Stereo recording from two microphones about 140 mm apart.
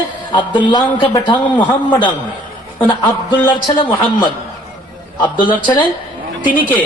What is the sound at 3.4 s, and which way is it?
Speech, 35° left (ahead or behind).